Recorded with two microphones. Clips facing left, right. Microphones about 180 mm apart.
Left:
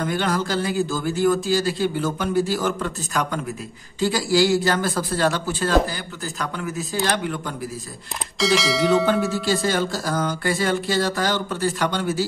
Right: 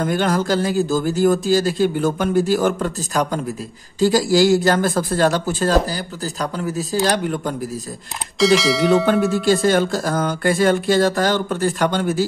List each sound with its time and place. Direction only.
0.0 s a man's voice: 45° right (ahead or behind)
8.4 s speech: centre (ahead or behind)
9.5 s speech: 55° right (ahead or behind)